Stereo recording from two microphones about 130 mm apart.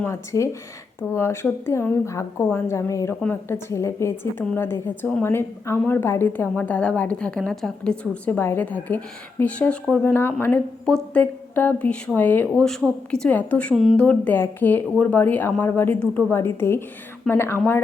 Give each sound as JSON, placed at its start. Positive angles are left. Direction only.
{"t": 0.0, "sound": "a woman's voice", "side_deg": 20}